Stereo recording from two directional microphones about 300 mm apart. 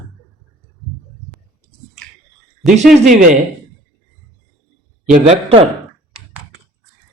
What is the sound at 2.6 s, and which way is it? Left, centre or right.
Speech, centre.